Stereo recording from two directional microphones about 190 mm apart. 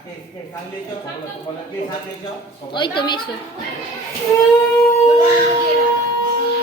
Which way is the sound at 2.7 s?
25° left (ahead or behind).